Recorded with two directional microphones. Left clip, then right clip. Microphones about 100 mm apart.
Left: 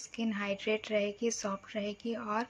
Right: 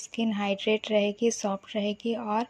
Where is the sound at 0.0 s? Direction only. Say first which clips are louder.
Right 6 dB; 45° right (ahead or behind).